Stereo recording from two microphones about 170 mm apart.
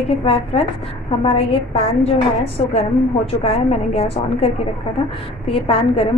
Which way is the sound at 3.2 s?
35° left (ahead or behind).